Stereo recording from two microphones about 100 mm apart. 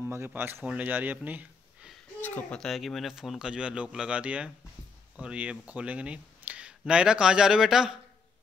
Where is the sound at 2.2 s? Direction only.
15° left (ahead or behind).